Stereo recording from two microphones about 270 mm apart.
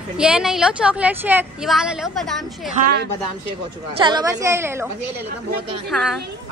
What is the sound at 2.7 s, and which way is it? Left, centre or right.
Speech, right.